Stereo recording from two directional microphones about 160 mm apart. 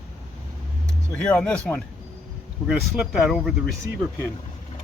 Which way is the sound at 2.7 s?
5° right (ahead or behind).